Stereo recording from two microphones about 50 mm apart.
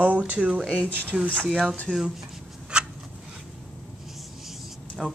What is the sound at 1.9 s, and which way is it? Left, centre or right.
Speech, right.